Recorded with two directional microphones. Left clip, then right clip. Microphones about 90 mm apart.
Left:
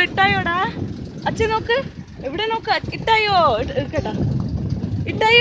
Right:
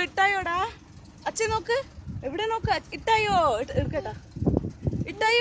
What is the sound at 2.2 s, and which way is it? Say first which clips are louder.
Speech: left 6 dB; 25° right (ahead or behind).